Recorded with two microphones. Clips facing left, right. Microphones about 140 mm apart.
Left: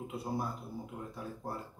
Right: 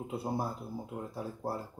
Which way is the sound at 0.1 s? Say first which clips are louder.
Right 3 dB; 30° right (ahead or behind).